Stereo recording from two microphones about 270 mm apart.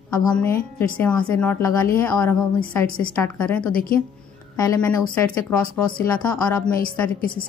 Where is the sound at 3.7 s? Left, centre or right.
Left.